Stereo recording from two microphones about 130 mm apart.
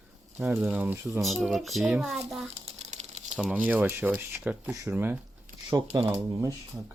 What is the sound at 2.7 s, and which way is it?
Typewriter, 60° right (ahead or behind).